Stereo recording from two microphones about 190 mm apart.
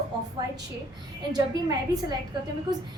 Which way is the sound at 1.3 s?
20° right (ahead or behind).